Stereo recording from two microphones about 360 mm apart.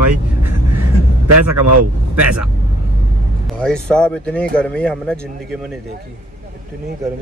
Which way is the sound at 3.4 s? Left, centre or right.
Centre.